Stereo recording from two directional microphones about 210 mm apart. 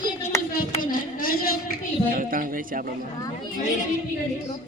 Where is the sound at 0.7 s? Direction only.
45° left (ahead or behind).